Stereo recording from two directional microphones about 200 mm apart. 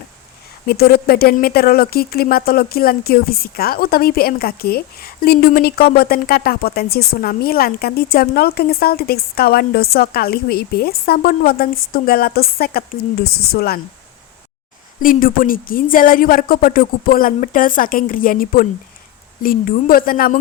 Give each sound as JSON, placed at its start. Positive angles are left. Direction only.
{"t": 0.7, "sound": "speech", "side_deg": 50}
{"t": 15.0, "sound": "speech", "side_deg": 45}